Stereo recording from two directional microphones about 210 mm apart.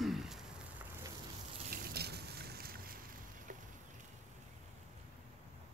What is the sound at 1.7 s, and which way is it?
Boat, 45° right (ahead or behind).